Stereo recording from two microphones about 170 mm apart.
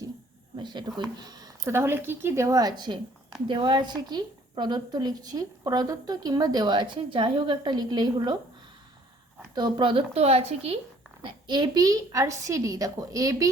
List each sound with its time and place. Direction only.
0.5 s a woman's voice: 25° right (ahead or behind)
9.6 s a woman's voice: 25° right (ahead or behind)